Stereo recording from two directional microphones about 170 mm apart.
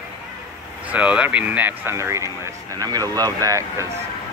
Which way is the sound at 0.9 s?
5° right (ahead or behind).